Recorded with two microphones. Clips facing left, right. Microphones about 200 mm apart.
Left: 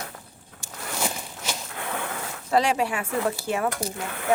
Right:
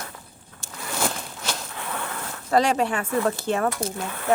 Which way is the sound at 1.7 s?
70° left (ahead or behind).